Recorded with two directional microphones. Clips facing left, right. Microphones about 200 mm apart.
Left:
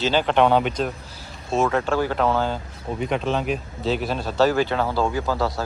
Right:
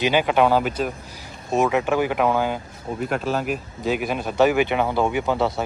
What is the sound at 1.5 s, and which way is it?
Speech, 15° right (ahead or behind).